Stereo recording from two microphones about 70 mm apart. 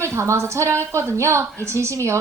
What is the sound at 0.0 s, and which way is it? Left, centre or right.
A woman's voice, right.